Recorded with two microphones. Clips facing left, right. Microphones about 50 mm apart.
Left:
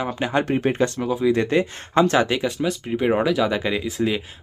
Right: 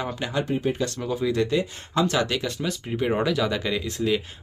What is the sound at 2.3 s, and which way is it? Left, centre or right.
Speech, centre.